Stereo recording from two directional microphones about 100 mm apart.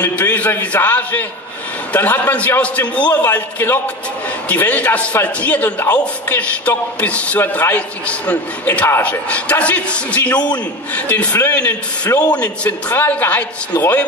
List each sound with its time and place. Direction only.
0.1 s a man's voice: 15° left (ahead or behind)